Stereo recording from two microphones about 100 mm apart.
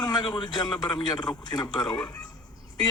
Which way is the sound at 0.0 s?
45° left (ahead or behind).